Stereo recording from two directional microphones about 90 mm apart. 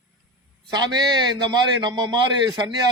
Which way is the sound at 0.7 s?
50° right (ahead or behind).